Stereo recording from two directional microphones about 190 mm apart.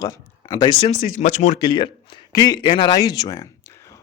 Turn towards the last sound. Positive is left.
turn(degrees=20)  # may be behind; listen again after turning